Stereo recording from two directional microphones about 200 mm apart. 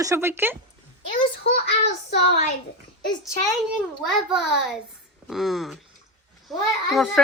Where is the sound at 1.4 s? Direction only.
55° left (ahead or behind).